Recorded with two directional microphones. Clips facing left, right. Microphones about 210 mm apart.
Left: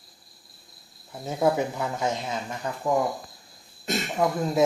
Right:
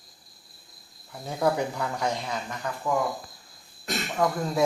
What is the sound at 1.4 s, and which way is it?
Speech, 20° left (ahead or behind).